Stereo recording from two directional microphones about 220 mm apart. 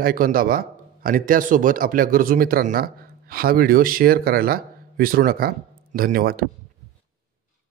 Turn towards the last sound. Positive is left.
turn(degrees=-40)  # may be behind; listen again after turning